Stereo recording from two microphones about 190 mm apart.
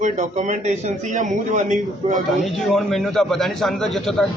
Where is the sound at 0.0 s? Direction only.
40° right (ahead or behind).